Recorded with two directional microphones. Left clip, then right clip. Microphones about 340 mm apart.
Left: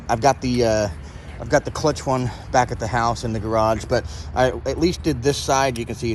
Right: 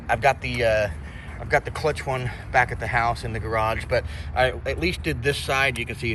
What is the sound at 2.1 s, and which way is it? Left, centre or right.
Speech, left.